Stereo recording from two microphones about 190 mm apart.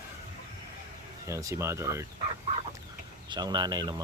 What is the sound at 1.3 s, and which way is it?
Speech, 15° right (ahead or behind).